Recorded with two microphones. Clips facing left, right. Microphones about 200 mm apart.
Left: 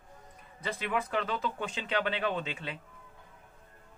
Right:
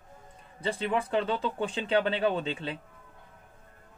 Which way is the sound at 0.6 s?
30° right (ahead or behind).